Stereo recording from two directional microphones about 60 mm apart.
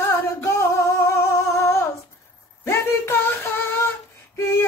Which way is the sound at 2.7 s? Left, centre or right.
Left.